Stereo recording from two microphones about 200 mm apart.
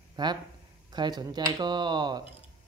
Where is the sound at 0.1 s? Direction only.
20° right (ahead or behind).